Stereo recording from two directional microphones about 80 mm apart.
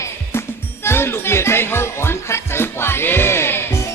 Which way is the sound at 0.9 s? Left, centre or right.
Left.